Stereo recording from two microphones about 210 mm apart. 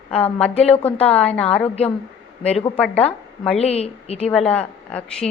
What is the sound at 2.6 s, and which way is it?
Speech, 5° left (ahead or behind).